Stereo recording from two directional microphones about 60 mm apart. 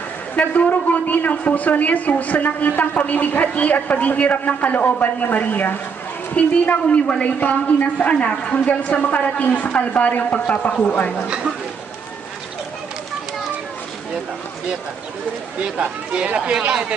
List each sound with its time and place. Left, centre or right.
0.3 s a man's voice: left
15.6 s speech: centre